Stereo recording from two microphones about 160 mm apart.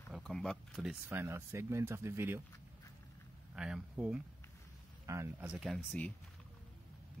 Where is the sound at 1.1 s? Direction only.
15° right (ahead or behind).